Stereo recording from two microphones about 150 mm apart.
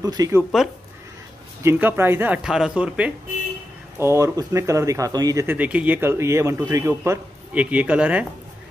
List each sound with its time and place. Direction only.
0.0 s speech: 25° right (ahead or behind)
0.4 s speech: centre (ahead or behind)
1.6 s speech: 15° right (ahead or behind)
4.0 s speech: 20° right (ahead or behind)
5.6 s speech: 10° right (ahead or behind)